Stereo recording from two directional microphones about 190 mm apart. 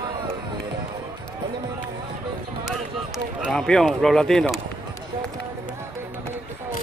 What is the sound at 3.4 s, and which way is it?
Speech, centre (ahead or behind).